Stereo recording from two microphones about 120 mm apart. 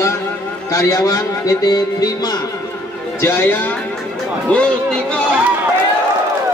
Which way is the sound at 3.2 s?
20° left (ahead or behind).